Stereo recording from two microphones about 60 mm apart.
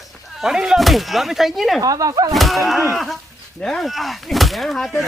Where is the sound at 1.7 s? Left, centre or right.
Right.